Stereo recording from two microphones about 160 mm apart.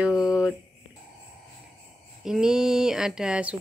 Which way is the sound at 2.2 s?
5° right (ahead or behind).